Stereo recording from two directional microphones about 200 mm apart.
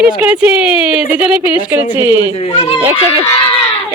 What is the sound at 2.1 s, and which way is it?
Speech, 25° left (ahead or behind).